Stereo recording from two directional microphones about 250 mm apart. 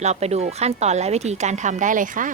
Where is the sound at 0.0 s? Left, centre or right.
Right.